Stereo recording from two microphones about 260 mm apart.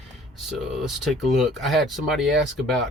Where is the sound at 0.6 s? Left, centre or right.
Centre.